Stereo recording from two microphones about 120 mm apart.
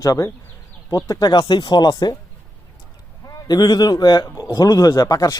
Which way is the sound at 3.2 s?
35° left (ahead or behind).